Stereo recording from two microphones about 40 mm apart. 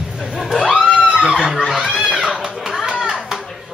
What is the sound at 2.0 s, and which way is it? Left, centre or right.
Music, centre.